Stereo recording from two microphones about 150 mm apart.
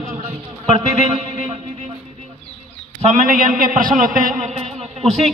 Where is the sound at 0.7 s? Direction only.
45° right (ahead or behind).